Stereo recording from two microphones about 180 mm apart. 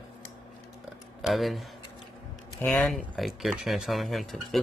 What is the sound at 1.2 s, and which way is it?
Speech, centre (ahead or behind).